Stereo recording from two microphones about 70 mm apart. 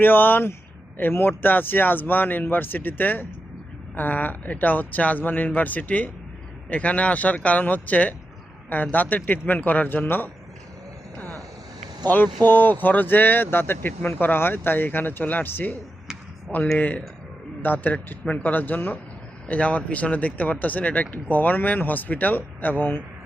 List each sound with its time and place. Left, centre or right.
0.0 s speech: left
12.0 s speech: left
16.7 s speech: left